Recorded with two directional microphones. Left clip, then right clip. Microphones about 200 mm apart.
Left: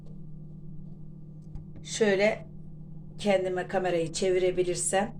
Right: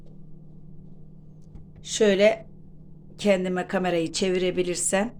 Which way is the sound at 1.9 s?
60° right (ahead or behind).